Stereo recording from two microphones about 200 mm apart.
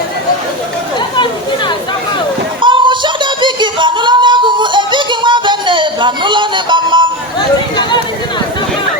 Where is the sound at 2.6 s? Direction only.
25° right (ahead or behind).